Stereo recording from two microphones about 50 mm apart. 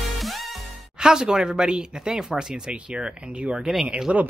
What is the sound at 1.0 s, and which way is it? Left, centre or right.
Speech, centre.